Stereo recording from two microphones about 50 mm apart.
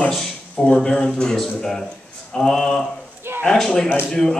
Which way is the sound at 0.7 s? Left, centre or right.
Centre.